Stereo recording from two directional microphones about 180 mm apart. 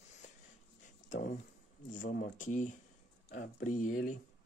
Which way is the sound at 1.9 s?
50° left (ahead or behind).